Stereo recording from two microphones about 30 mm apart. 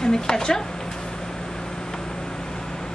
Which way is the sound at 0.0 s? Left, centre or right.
Left.